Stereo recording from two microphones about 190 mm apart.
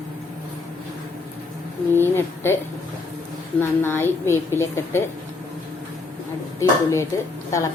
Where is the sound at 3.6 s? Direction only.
10° left (ahead or behind).